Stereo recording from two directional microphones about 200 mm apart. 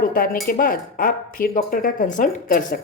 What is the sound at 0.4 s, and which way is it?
A woman's voice, 45° left (ahead or behind).